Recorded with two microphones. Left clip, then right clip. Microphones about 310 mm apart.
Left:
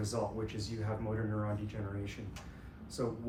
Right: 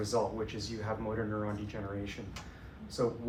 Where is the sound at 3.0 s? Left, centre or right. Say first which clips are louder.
Right 5 dB; centre.